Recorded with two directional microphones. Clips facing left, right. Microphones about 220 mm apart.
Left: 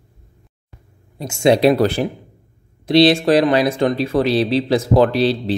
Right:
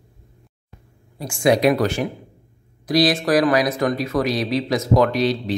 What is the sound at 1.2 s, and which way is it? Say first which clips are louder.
Speech: left 3 dB; 25° left (ahead or behind).